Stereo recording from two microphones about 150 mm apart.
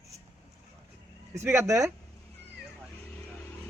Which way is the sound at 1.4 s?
15° right (ahead or behind).